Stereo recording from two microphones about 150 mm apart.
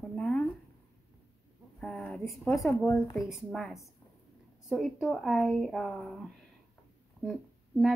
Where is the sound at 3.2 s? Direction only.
Centre (ahead or behind).